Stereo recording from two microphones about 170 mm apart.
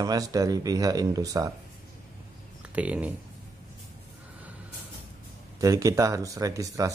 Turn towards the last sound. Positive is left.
turn(degrees=-20)  # may be behind; listen again after turning